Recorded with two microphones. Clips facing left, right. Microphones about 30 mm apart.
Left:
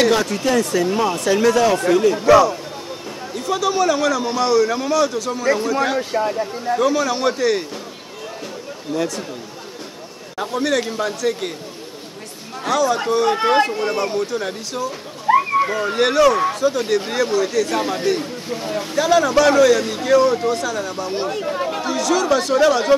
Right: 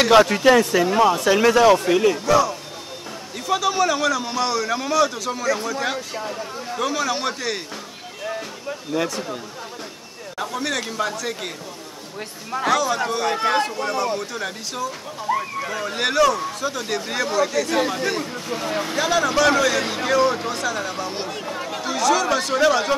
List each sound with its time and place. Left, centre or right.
0.1 s speech: right; by 2.1 s centre
2.1 s speech: left
3.3 s a man's voice: centre
6.1 s speech: left
6.8 s a man's voice: centre
8.9 s speech: centre
10.3 s a man's voice: centre
12.7 s a man's voice: centre; by 14.0 s left
14.0 s a man's voice: centre
15.3 s speech: left
15.7 s a man's voice: centre